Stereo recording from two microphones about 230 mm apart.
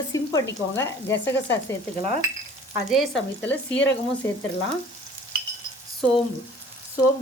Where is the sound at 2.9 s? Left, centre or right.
Centre.